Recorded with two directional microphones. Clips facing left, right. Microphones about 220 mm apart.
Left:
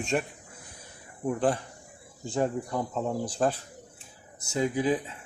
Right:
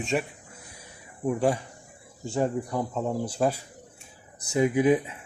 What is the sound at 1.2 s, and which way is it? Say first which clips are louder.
Speech: right 2 dB; 10° right (ahead or behind).